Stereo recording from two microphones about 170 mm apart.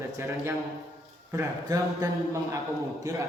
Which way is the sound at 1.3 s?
20° right (ahead or behind).